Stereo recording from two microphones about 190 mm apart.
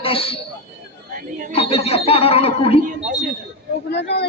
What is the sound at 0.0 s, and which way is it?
Speech, 30° left (ahead or behind).